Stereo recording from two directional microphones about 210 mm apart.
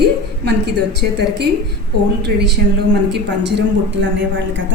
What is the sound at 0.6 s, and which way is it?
A woman's voice, 50° right (ahead or behind).